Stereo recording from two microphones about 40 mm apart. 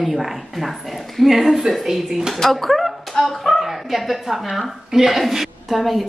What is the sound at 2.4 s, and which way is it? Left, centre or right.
A woman's voice, centre.